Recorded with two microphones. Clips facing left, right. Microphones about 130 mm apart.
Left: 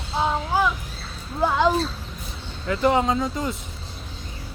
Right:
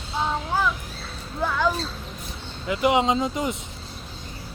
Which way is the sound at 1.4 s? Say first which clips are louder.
Left 4 dB; 20° left (ahead or behind).